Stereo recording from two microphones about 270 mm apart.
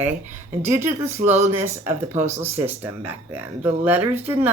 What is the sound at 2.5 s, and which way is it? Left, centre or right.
Speech, centre.